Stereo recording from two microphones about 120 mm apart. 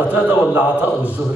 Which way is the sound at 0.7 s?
15° left (ahead or behind).